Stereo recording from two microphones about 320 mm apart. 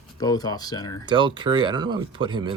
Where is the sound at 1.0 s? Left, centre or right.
Centre.